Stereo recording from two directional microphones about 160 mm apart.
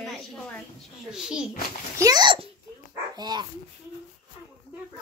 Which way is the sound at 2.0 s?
25° right (ahead or behind).